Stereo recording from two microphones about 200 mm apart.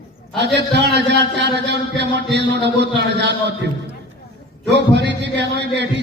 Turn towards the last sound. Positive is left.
turn(degrees=-60)  # may be behind; listen again after turning